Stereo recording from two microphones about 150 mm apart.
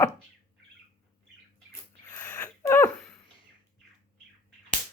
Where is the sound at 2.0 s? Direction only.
20° left (ahead or behind).